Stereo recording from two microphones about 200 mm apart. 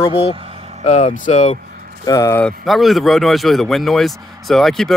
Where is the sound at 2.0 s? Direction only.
15° left (ahead or behind).